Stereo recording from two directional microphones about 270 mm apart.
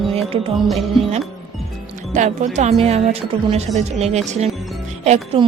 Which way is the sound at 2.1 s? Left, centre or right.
Right.